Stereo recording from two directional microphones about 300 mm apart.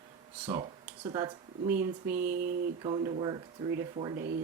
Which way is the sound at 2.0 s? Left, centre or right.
Right.